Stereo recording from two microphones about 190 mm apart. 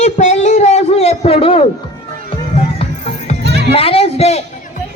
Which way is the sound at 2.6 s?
30° left (ahead or behind).